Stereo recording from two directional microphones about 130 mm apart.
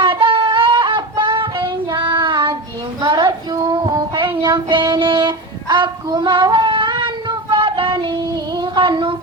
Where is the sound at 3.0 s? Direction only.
35° right (ahead or behind).